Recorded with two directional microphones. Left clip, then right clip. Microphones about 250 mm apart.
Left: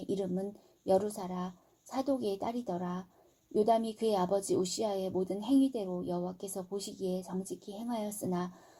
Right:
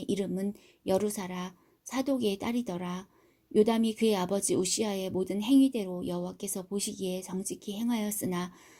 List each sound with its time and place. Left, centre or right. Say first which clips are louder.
0.0 s speech: right 2 dB; right